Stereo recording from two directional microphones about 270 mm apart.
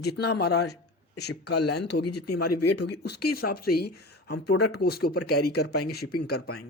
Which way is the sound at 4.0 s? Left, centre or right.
Left.